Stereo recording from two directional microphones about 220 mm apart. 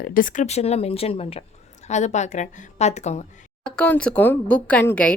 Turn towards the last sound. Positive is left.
turn(degrees=5)  # may be behind; listen again after turning